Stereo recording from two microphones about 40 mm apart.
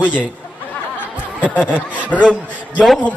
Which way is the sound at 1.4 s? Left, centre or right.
Left.